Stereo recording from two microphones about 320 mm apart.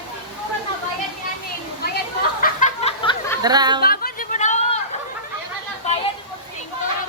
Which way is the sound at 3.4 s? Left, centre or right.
Centre.